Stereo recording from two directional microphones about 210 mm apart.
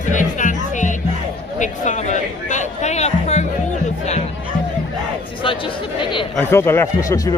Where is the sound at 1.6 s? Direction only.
35° left (ahead or behind).